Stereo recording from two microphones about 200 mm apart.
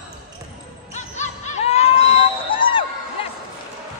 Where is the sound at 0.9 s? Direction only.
35° left (ahead or behind).